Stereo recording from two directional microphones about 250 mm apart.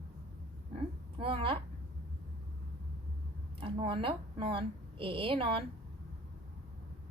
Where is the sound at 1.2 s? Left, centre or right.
Right.